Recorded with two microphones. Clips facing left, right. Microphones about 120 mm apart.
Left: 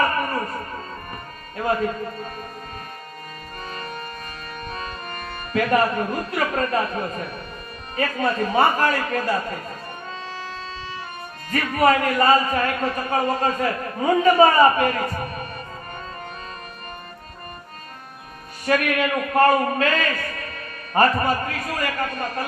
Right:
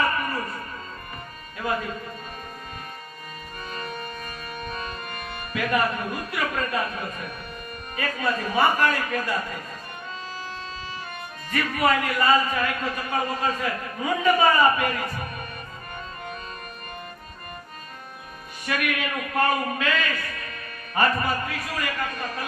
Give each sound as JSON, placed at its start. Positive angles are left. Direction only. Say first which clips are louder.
{"t": 3.7, "sound": "music", "louder": "even", "side_deg": 40}
{"t": 4.6, "sound": "a man's voice", "louder": "left 2 dB", "side_deg": 40}
{"t": 11.5, "sound": "a man's voice", "louder": "left 4 dB", "side_deg": 40}
{"t": 18.6, "sound": "a man's voice", "louder": "left 7 dB", "side_deg": 40}